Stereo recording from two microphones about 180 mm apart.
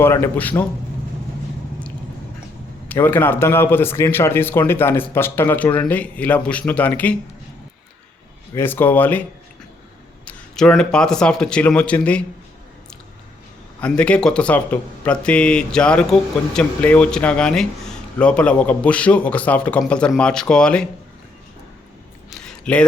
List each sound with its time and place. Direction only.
0.0 s speech: 10° left (ahead or behind)
2.9 s speech: 10° left (ahead or behind)
8.5 s speech: 10° left (ahead or behind)
10.2 s speech: 5° left (ahead or behind)
13.8 s speech: 5° left (ahead or behind)
22.3 s a sound: 5° left (ahead or behind)